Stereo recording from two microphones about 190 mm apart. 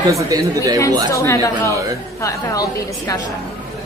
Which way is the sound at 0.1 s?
15° right (ahead or behind).